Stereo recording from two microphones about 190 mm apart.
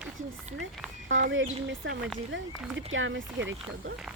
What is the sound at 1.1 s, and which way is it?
Speech, 85° right.